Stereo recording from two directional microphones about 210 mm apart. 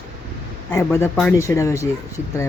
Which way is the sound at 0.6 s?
10° left (ahead or behind).